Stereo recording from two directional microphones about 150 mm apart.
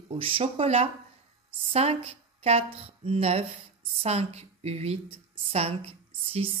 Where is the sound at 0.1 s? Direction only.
35° right (ahead or behind).